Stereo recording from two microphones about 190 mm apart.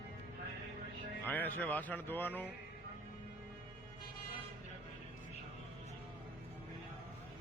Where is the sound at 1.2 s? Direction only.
10° left (ahead or behind).